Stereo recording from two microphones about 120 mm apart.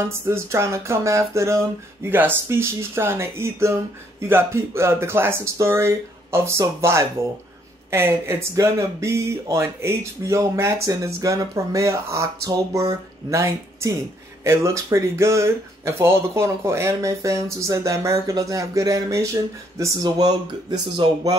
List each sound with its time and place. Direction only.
0.0 s speech: 20° right (ahead or behind); by 21.4 s 35° right (ahead or behind)